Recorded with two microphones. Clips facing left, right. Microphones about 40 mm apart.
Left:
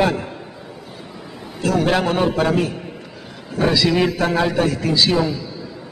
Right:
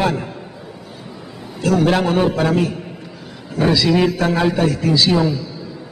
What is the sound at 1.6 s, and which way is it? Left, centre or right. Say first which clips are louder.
A man's voice: right 2 dB; centre.